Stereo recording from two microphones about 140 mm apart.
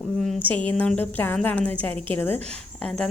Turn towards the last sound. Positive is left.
turn(degrees=5)  # may be behind; listen again after turning